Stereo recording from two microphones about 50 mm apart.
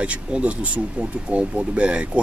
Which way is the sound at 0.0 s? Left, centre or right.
Right.